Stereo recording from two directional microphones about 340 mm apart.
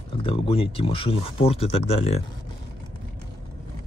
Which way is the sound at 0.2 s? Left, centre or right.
Centre.